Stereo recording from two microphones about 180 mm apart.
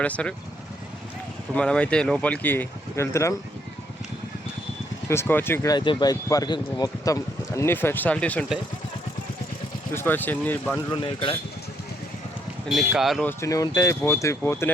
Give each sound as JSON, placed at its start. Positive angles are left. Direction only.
{"t": 0.0, "sound": "speech", "side_deg": 5}
{"t": 1.5, "sound": "speech", "side_deg": 5}
{"t": 5.0, "sound": "speech", "side_deg": 15}
{"t": 9.9, "sound": "speech", "side_deg": 10}
{"t": 10.9, "sound": "speech", "side_deg": 30}
{"t": 12.6, "sound": "speech", "side_deg": -5}
{"t": 13.2, "sound": "speech", "side_deg": 15}